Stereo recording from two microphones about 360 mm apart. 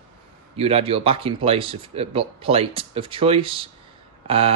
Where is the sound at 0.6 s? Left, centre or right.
Centre.